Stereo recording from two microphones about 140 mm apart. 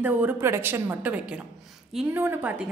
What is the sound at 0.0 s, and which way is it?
A woman's voice, 15° right (ahead or behind).